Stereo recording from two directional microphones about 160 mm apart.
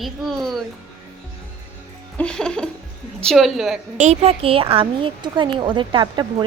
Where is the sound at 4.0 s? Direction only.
40° right (ahead or behind).